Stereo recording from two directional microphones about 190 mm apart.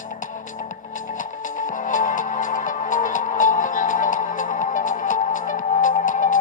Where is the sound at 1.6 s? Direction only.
45° left (ahead or behind).